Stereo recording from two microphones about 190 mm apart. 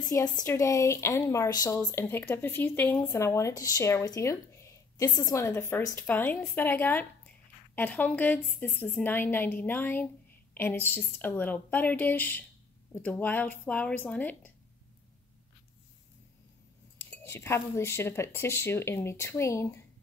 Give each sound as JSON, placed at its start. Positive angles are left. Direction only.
{"t": 0.1, "sound": "a woman's voice", "side_deg": 15}
{"t": 17.0, "sound": "speech", "side_deg": 10}